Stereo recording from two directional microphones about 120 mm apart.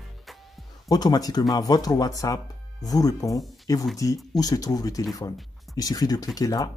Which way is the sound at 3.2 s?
Centre (ahead or behind).